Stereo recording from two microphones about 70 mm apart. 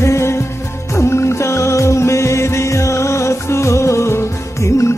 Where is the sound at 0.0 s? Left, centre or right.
Left.